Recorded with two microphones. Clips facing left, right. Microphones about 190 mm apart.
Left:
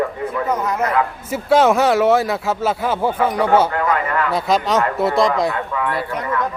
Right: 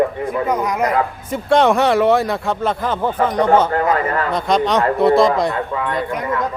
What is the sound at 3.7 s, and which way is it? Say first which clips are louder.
Speech: right 2 dB; 40° right (ahead or behind).